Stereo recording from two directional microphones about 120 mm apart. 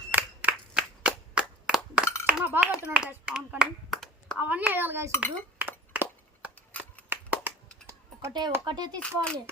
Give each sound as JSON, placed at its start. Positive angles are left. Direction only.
{"t": 0.1, "sound": "clapping", "side_deg": -10}
{"t": 2.2, "sound": "a sound", "side_deg": -15}
{"t": 2.7, "sound": "speech", "side_deg": -5}
{"t": 4.4, "sound": "a child's voice", "side_deg": -15}
{"t": 5.5, "sound": "a sound", "side_deg": -15}
{"t": 7.1, "sound": "clapping", "side_deg": -15}
{"t": 8.3, "sound": "speech", "side_deg": -40}
{"t": 9.0, "sound": "speech", "side_deg": 5}